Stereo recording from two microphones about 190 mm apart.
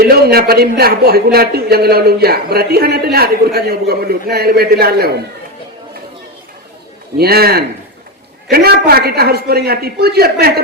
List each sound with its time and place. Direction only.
0.0 s speech: 55° right (ahead or behind)
7.2 s speech: 55° right (ahead or behind)